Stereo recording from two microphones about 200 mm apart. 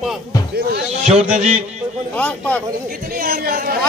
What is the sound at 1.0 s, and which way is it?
Speech, 35° right (ahead or behind).